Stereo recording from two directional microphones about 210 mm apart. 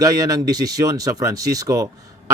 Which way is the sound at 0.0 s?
15° right (ahead or behind).